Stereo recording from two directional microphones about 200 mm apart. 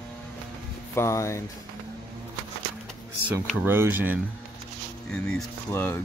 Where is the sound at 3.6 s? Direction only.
10° right (ahead or behind).